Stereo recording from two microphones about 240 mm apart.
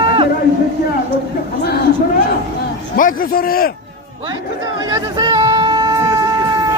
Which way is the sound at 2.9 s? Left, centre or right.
Left.